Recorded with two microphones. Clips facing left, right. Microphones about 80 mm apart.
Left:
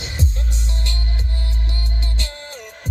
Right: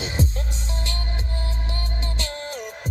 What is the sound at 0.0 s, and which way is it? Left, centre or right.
Music, right.